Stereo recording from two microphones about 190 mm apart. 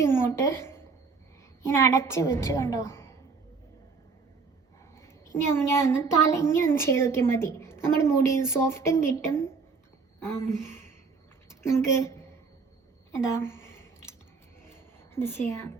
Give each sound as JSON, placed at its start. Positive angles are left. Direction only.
{"t": 0.0, "sound": "a woman's voice", "side_deg": 15}
{"t": 4.9, "sound": "a child's voice", "side_deg": 15}
{"t": 10.5, "sound": "a woman's voice", "side_deg": 15}
{"t": 15.1, "sound": "a child's voice", "side_deg": 10}